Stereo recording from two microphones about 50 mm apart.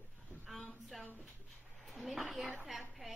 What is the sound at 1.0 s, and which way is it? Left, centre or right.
Speech, left.